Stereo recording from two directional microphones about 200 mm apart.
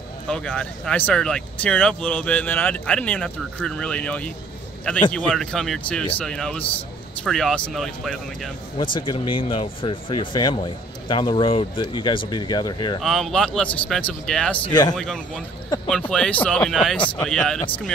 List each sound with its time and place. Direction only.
0.3 s speech: 5° left (ahead or behind)
8.7 s speech: 25° left (ahead or behind)
13.0 s speech: centre (ahead or behind)
14.6 s speech: 20° left (ahead or behind)
15.0 s speech: 5° left (ahead or behind)